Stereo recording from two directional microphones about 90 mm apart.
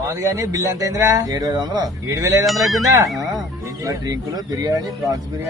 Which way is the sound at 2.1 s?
35° right (ahead or behind).